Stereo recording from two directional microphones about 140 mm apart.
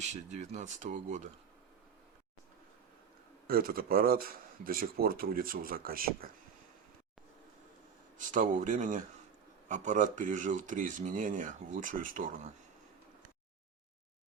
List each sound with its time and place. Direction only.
0.1 s speech: 55° right (ahead or behind)
3.4 s speech: 90° right
8.3 s speech: 70° right (ahead or behind)